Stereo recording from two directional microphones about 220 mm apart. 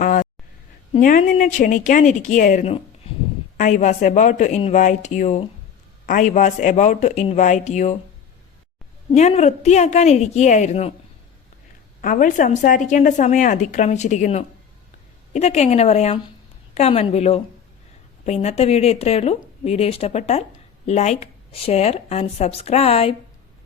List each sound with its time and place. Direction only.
0.0 s a sound: 35° left (ahead or behind)
0.9 s a woman's voice: 40° left (ahead or behind)
9.1 s a woman's voice: 30° left (ahead or behind)
12.0 s a woman's voice: 35° left (ahead or behind)